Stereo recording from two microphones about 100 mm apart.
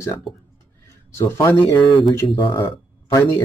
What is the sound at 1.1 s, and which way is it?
Speech, 25° left (ahead or behind).